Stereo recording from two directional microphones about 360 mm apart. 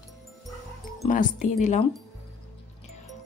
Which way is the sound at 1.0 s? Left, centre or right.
Left.